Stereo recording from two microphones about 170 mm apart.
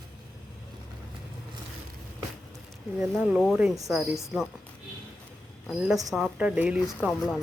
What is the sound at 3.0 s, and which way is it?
A woman's voice, 5° right (ahead or behind).